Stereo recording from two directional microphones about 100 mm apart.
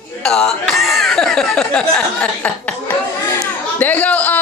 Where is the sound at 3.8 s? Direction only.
15° left (ahead or behind).